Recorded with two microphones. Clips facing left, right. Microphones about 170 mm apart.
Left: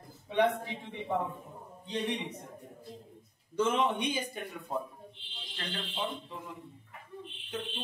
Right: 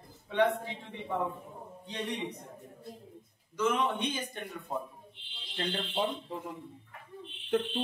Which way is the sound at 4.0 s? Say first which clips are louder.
Left 1 dB; 5° left (ahead or behind).